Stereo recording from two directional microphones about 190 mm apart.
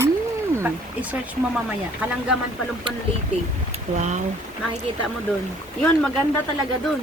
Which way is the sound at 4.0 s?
40° right (ahead or behind).